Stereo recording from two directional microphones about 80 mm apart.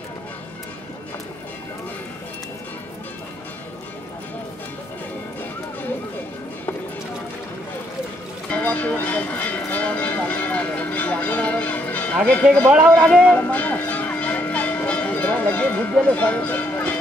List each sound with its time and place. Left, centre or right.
8.5 s a sound: centre
12.3 s speech: centre
13.5 s bell: centre